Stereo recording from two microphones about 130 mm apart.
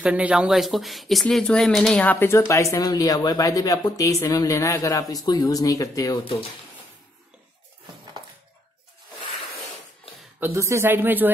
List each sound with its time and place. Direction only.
0.0 s speech: 10° right (ahead or behind); by 6.1 s 25° left (ahead or behind)
10.4 s speech: 20° right (ahead or behind)